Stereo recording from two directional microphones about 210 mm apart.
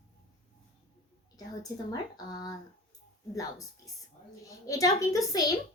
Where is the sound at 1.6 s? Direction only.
15° left (ahead or behind).